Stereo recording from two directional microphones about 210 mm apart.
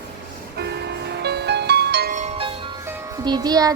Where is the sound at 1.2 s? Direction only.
50° right (ahead or behind).